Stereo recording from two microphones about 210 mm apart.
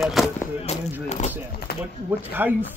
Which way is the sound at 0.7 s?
30° left (ahead or behind).